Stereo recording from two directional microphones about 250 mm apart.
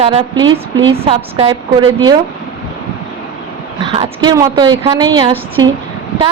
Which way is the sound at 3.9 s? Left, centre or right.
Centre.